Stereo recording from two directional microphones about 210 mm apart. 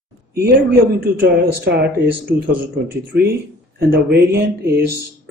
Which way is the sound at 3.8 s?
50° right (ahead or behind).